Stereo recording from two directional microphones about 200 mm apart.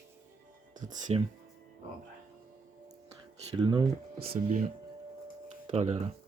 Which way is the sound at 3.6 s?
20° right (ahead or behind).